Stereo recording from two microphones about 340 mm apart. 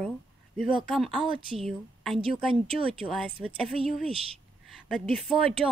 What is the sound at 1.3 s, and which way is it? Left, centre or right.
Speech, centre.